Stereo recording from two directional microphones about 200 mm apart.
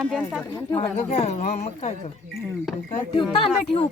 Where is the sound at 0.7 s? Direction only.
30° left (ahead or behind).